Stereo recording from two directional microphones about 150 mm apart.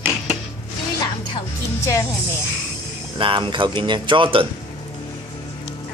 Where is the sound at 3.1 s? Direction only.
35° right (ahead or behind).